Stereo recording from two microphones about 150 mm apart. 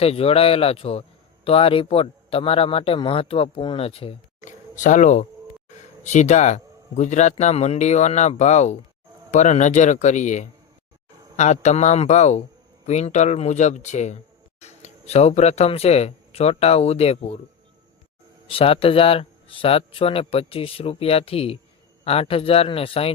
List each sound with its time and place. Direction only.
0.0 s speech: 40° left (ahead or behind)
4.4 s speech: 55° left (ahead or behind)
18.5 s speech: 40° left (ahead or behind)